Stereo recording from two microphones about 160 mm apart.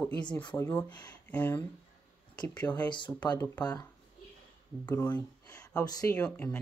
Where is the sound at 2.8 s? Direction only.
30° left (ahead or behind).